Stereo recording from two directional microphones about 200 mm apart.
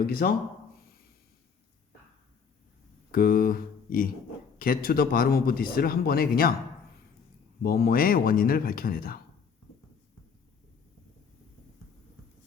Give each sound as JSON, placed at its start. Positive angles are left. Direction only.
{"t": 0.1, "sound": "a man's voice", "side_deg": 50}
{"t": 3.1, "sound": "a man's voice", "side_deg": 45}
{"t": 7.6, "sound": "a man's voice", "side_deg": 50}